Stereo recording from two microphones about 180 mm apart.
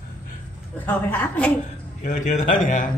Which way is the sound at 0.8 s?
10° left (ahead or behind).